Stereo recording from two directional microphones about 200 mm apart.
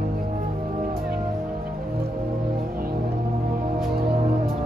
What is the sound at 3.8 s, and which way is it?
Music, 50° right (ahead or behind).